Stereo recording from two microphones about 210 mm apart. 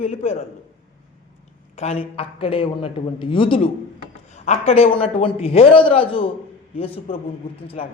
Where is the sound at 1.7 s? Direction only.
30° left (ahead or behind).